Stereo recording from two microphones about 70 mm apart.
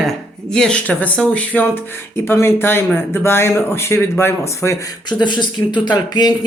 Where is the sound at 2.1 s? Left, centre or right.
Left.